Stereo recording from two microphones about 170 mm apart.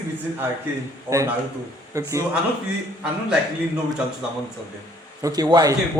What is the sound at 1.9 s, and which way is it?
Speech, 15° right (ahead or behind).